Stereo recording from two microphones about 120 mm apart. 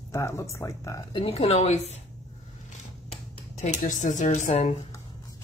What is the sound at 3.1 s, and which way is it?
Speech, 80° left.